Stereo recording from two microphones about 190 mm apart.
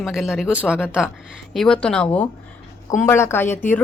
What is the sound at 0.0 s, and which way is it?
Speech, centre (ahead or behind).